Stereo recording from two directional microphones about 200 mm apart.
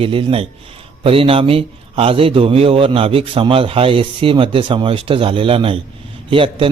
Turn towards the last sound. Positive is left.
turn(degrees=-25)  # may be behind; listen again after turning